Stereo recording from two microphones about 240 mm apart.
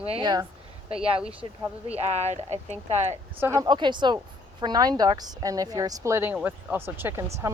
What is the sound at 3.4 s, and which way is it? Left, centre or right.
Speech, centre.